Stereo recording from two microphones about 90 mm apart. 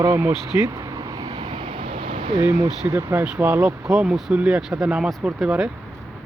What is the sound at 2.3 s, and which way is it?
Speech, 45° right (ahead or behind).